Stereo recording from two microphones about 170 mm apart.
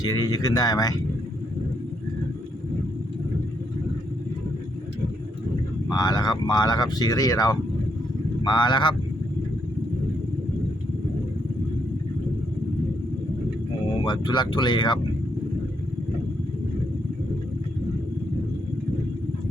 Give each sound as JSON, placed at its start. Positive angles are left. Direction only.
{"t": 0.0, "sound": "speech", "side_deg": 20}
{"t": 5.9, "sound": "speech", "side_deg": 25}
{"t": 14.0, "sound": "speech", "side_deg": 25}